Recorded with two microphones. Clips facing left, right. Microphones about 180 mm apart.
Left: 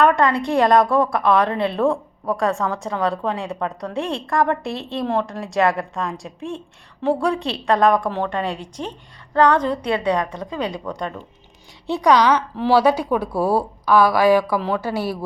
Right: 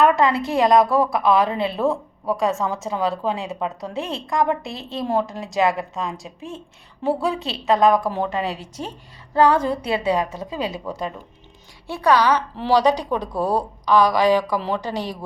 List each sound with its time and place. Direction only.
0.2 s a woman's voice: 5° right (ahead or behind)
11.9 s a woman's voice: 15° left (ahead or behind)
12.2 s a woman's voice: 10° right (ahead or behind)
12.6 s a woman's voice: 10° left (ahead or behind)